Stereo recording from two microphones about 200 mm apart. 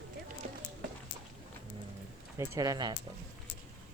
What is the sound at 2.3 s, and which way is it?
Speech, 15° right (ahead or behind).